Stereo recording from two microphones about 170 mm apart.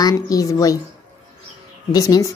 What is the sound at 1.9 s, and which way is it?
Speech, 20° left (ahead or behind).